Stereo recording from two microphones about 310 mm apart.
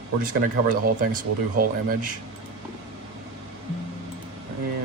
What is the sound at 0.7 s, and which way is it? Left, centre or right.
Speech, right.